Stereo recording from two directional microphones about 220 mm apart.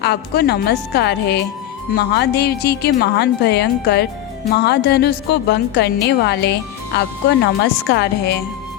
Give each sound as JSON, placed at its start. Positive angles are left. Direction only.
{"t": 0.0, "sound": "a woman's voice", "side_deg": 45}